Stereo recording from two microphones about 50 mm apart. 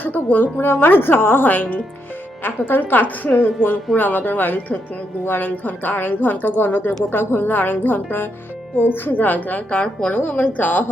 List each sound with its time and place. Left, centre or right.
0.0 s a woman's voice: left
10.2 s a woman's voice: left